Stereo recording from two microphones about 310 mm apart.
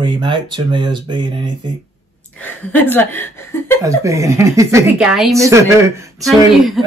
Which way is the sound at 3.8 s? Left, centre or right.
Centre.